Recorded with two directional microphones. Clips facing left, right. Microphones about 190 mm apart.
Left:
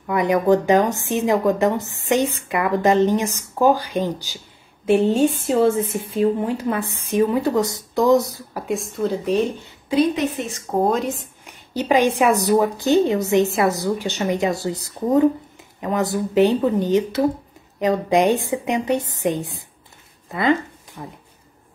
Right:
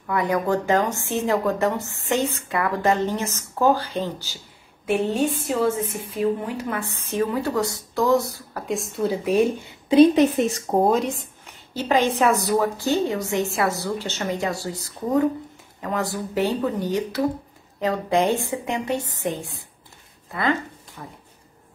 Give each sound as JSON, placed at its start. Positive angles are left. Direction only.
{"t": 0.0, "sound": "a woman's voice", "side_deg": 20}
{"t": 4.8, "sound": "a woman's voice", "side_deg": 25}
{"t": 8.6, "sound": "speech", "side_deg": 0}
{"t": 10.8, "sound": "speech", "side_deg": 0}
{"t": 11.4, "sound": "a sound", "side_deg": 15}
{"t": 12.2, "sound": "a woman's voice", "side_deg": 15}